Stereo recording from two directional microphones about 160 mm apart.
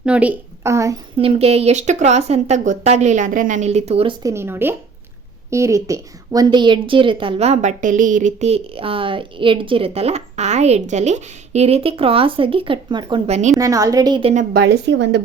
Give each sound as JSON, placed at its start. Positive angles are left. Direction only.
{"t": 0.0, "sound": "a woman's voice", "side_deg": -10}
{"t": 1.2, "sound": "speech", "side_deg": -40}
{"t": 4.2, "sound": "a woman's voice", "side_deg": -20}
{"t": 13.2, "sound": "a woman's voice", "side_deg": -40}
{"t": 13.6, "sound": "a woman's voice", "side_deg": -20}
{"t": 14.5, "sound": "a woman's voice", "side_deg": -85}